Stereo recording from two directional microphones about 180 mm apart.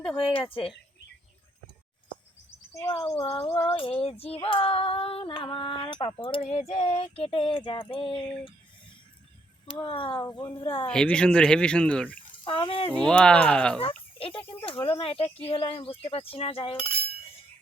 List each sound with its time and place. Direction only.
0.2 s speech: 30° left (ahead or behind)
2.9 s speech: 30° left (ahead or behind)
4.0 s female singing: 35° left (ahead or behind)
9.8 s female singing: 25° left (ahead or behind)
10.8 s speech: 5° left (ahead or behind)
12.5 s female singing: 30° left (ahead or behind)
12.9 s speech: 5° left (ahead or behind)
14.2 s speech: 30° left (ahead or behind)